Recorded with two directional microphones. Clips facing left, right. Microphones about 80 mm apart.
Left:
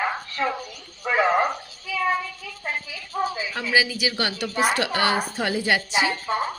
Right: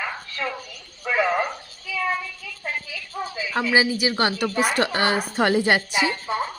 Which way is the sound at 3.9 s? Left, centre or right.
Right.